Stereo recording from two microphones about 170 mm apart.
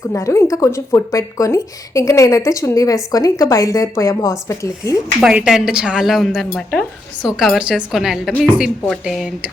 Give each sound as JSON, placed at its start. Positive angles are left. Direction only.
{"t": 0.1, "sound": "speech", "side_deg": 20}
{"t": 5.2, "sound": "a woman's voice", "side_deg": -5}